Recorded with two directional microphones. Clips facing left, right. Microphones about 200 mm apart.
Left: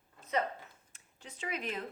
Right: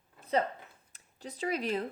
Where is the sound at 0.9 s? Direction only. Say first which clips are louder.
Right 13 dB; 35° right (ahead or behind).